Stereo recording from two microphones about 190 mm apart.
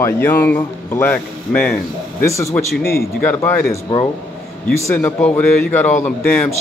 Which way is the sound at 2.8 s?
55° left (ahead or behind).